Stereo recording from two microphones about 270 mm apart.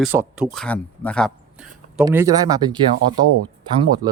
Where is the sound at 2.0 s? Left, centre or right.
Centre.